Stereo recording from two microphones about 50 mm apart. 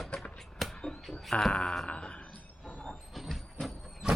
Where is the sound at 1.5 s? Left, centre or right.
Centre.